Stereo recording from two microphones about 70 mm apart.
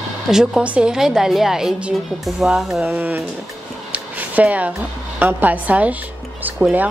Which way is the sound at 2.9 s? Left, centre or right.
Right.